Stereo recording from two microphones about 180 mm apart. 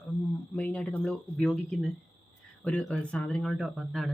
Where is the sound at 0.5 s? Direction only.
5° left (ahead or behind).